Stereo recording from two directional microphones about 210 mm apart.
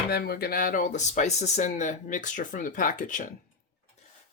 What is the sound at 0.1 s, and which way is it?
Speech, 50° left (ahead or behind).